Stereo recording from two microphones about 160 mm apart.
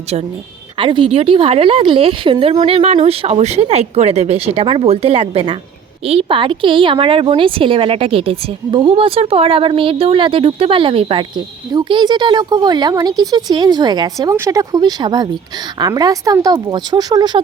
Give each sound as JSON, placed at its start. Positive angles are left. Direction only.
{"t": 0.1, "sound": "a woman's voice", "side_deg": -40}